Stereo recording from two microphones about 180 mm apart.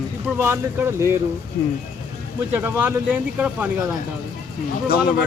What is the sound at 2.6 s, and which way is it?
Speech, 10° right (ahead or behind).